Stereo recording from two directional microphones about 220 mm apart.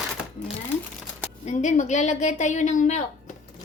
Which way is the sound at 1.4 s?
30° left (ahead or behind).